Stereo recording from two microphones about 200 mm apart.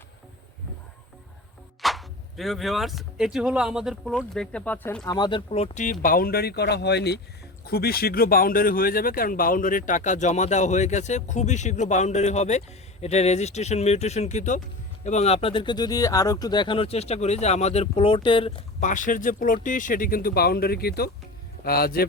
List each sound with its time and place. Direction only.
1.8 s speech: centre (ahead or behind)
5.0 s speech: 20° left (ahead or behind)
18.8 s a man's voice: 40° left (ahead or behind)